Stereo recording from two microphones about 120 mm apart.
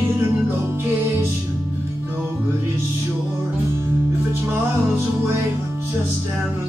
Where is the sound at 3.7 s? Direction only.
20° right (ahead or behind).